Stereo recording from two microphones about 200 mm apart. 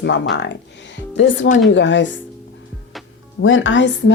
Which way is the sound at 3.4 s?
75° left (ahead or behind).